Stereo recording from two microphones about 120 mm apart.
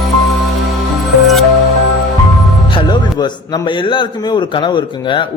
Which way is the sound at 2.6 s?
40° left (ahead or behind).